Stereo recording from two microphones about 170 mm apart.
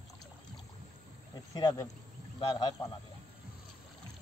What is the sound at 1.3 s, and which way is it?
Cricket, 25° left (ahead or behind).